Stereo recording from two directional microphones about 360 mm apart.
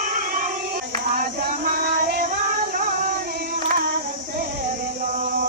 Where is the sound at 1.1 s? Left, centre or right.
Right.